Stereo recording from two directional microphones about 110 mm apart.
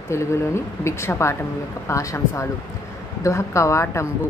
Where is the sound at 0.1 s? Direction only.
25° left (ahead or behind).